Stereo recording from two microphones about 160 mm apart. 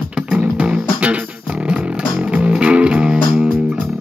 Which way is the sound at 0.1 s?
5° right (ahead or behind).